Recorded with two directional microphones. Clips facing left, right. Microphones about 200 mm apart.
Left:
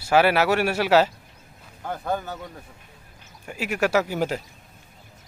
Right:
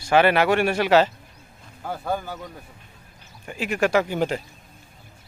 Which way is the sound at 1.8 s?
5° right (ahead or behind).